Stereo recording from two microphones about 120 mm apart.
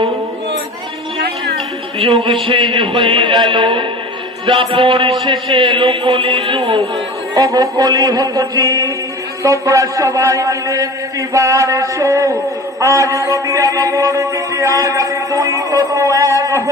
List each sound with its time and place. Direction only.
2.0 s a man's voice: 55° right (ahead or behind)
7.3 s music: 35° right (ahead or behind)
9.4 s a sound: 25° right (ahead or behind)